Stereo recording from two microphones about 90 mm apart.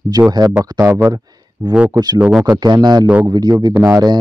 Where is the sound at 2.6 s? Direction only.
50° right (ahead or behind).